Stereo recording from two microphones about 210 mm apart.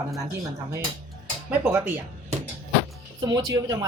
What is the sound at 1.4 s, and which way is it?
Speech, 10° right (ahead or behind).